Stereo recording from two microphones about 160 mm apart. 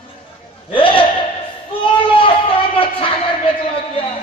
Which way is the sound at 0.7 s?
35° left (ahead or behind).